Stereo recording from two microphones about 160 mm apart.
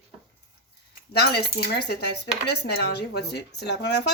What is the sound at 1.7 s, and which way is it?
Speech, 90° left.